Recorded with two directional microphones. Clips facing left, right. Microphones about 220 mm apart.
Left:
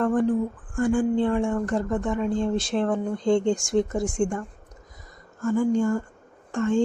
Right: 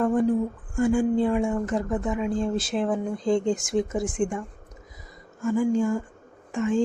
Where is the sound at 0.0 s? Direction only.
10° right (ahead or behind).